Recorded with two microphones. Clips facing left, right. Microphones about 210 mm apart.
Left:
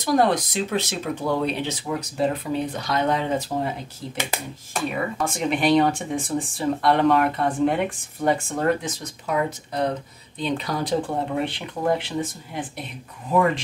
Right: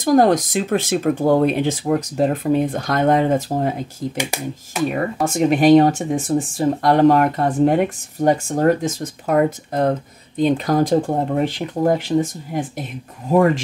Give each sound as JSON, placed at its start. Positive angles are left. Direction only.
{"t": 0.0, "sound": "speech", "side_deg": -45}
{"t": 4.2, "sound": "speech", "side_deg": -10}
{"t": 4.9, "sound": "speech", "side_deg": -45}